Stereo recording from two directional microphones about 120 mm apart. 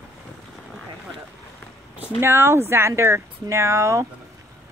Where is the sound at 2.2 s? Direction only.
20° right (ahead or behind).